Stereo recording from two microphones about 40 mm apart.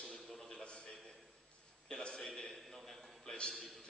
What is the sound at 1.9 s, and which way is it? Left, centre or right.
Speech, centre.